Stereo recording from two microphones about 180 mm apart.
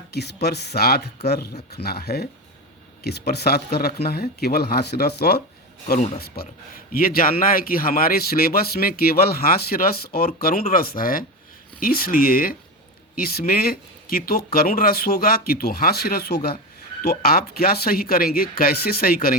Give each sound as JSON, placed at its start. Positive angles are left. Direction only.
{"t": 0.1, "sound": "speech", "side_deg": 65}